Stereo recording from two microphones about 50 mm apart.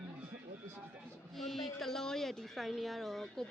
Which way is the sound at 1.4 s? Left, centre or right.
Centre.